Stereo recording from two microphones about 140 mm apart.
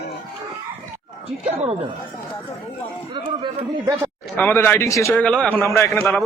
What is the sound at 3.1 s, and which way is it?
Speech, 35° right (ahead or behind).